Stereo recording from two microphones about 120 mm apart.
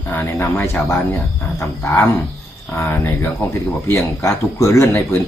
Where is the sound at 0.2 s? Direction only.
20° left (ahead or behind).